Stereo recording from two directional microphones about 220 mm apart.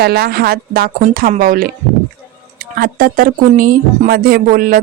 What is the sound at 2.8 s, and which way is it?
Speech, 40° right (ahead or behind).